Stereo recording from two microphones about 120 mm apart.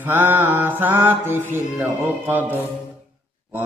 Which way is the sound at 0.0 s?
15° right (ahead or behind).